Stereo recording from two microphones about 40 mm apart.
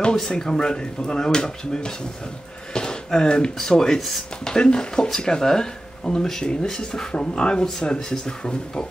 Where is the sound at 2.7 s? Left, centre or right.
Centre.